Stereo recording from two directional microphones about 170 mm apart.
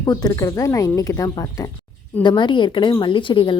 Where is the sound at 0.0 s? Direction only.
25° left (ahead or behind).